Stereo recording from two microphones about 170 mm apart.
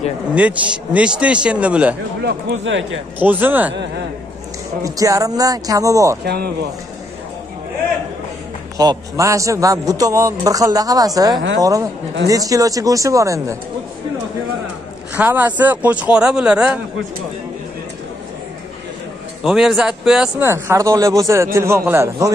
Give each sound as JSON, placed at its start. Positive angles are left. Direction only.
{"t": 0.3, "sound": "a man's voice", "side_deg": -10}
{"t": 2.2, "sound": "speech", "side_deg": -90}
{"t": 3.2, "sound": "a man's voice", "side_deg": -10}
{"t": 4.8, "sound": "a man's voice", "side_deg": -20}
{"t": 6.2, "sound": "speech", "side_deg": -70}
{"t": 8.7, "sound": "a man's voice", "side_deg": -20}
{"t": 15.1, "sound": "a man's voice", "side_deg": -10}
{"t": 19.4, "sound": "speech", "side_deg": 0}
{"t": 20.4, "sound": "a man's voice", "side_deg": -15}